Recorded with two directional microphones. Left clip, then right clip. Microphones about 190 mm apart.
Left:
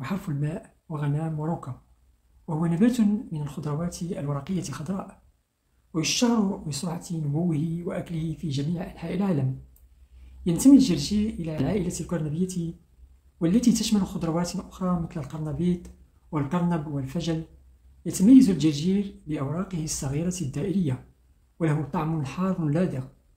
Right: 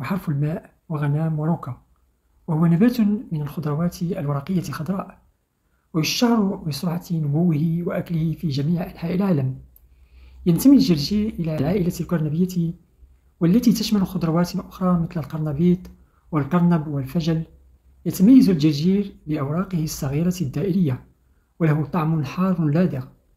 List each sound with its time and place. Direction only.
0.0 s a woman's voice: 20° right (ahead or behind)